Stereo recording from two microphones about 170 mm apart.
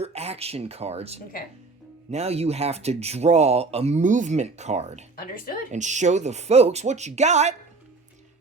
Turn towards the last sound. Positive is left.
turn(degrees=-40)  # may be behind; listen again after turning